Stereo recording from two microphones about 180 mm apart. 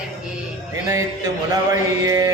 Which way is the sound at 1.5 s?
20° right (ahead or behind).